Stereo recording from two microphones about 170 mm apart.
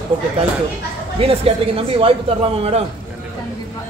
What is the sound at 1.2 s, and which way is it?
Speech, 35° right (ahead or behind).